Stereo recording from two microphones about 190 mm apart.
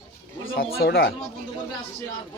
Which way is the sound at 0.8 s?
55° left (ahead or behind).